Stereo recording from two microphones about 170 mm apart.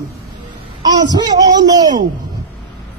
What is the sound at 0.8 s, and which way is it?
Speech, 25° right (ahead or behind).